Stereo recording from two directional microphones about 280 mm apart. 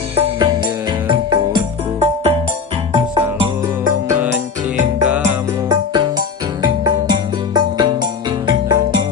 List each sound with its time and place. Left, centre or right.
0.1 s music: centre
4.1 s music: centre
7.5 s music: centre